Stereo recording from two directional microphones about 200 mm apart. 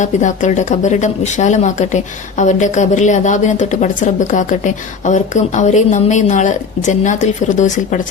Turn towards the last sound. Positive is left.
turn(degrees=40)  # may be behind; listen again after turning